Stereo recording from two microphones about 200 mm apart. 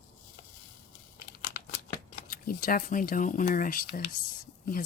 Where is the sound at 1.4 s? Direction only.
50° left (ahead or behind).